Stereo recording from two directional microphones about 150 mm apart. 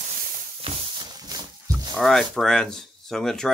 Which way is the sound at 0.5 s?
35° right (ahead or behind).